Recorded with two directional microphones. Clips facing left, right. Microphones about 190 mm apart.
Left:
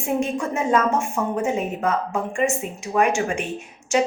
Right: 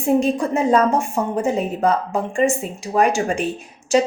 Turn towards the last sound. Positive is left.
turn(degrees=-35)  # may be behind; listen again after turning